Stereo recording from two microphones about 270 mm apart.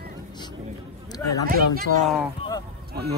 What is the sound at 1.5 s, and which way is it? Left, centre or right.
Speech, right.